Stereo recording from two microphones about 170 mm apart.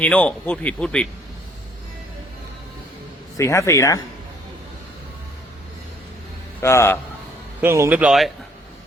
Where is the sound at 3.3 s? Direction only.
15° left (ahead or behind).